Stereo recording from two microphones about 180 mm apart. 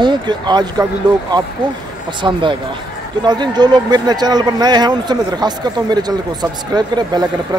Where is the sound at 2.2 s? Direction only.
20° right (ahead or behind).